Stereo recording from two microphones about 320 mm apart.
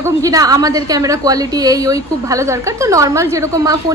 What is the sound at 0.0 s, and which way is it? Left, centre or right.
A woman's voice, centre.